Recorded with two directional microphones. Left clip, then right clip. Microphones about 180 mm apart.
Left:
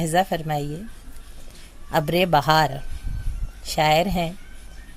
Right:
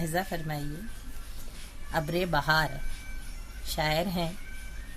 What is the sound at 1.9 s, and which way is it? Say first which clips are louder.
A woman's voice: left 10 dB; 45° left (ahead or behind).